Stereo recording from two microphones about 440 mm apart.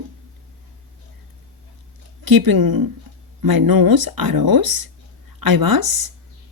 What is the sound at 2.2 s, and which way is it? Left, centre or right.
Speech, right.